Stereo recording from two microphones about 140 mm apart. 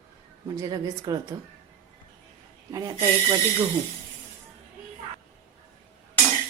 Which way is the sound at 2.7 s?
25° right (ahead or behind).